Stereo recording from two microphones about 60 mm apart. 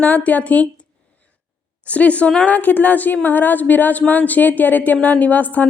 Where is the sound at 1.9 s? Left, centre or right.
Left.